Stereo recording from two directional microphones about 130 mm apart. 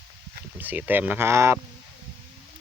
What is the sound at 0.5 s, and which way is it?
Speech, 15° right (ahead or behind).